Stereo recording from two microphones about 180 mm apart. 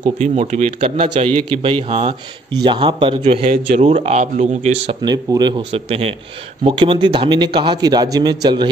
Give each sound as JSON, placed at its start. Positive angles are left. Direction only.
{"t": 0.2, "sound": "a man's voice", "side_deg": -40}
{"t": 5.0, "sound": "a man's voice", "side_deg": -20}